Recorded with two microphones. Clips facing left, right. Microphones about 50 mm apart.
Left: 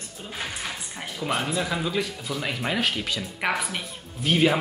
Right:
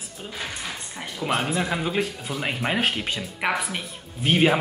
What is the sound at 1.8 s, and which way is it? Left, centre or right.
Speech, right.